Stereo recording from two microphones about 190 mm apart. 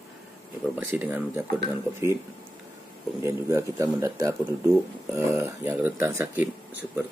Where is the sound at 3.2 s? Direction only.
15° right (ahead or behind).